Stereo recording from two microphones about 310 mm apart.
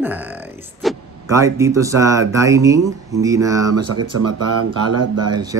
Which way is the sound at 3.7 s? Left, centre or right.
Right.